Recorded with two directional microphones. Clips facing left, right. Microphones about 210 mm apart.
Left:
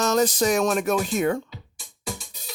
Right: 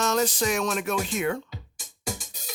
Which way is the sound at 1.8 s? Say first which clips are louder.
Even; 45° right (ahead or behind).